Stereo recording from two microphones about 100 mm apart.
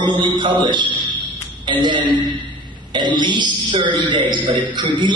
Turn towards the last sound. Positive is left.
turn(degrees=-50)  # may be behind; listen again after turning